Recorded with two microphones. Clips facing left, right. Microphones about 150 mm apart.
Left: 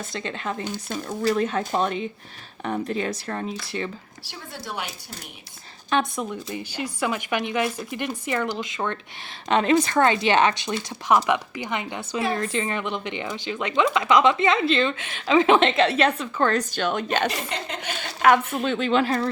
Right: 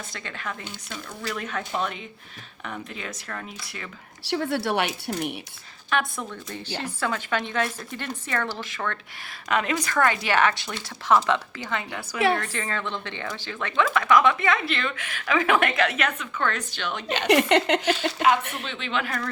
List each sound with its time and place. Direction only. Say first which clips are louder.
0.1 s speech: left 5 dB; 25° left (ahead or behind)
0.6 s speech: left 8 dB; 45° left (ahead or behind)
4.2 s speech: right 16 dB; 70° right (ahead or behind)
5.9 s speech: left 3 dB; 20° left (ahead or behind); by 17.2 s 50° left (ahead or behind)
17.2 s speech: right 9 dB; 70° right (ahead or behind)
17.9 s speech: left 8 dB; 55° left (ahead or behind)
18.6 s speech: left 8 dB; 45° left (ahead or behind)